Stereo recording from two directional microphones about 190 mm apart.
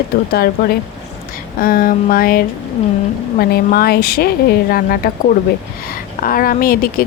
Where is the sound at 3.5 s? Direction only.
55° left (ahead or behind).